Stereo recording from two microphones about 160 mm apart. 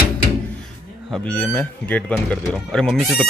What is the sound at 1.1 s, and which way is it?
Speech, 5° left (ahead or behind).